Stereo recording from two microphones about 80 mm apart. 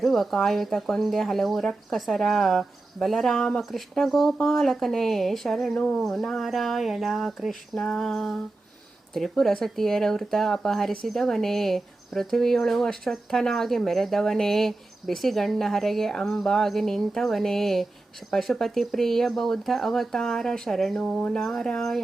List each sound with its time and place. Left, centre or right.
0.0 s speech: centre
5.7 s speech: centre
6.0 s speech: centre